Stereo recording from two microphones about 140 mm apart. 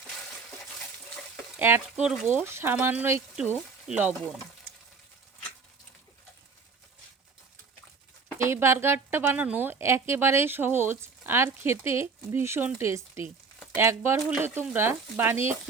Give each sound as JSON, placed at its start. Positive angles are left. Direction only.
{"t": 1.5, "sound": "speech", "side_deg": -15}
{"t": 8.4, "sound": "speech", "side_deg": -20}